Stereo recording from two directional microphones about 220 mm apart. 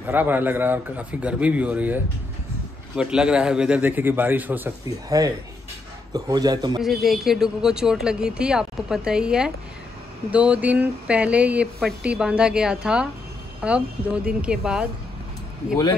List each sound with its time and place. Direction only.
0.0 s a man's voice: 10° right (ahead or behind)
3.0 s a man's voice: 5° right (ahead or behind)
6.8 s speech: centre (ahead or behind)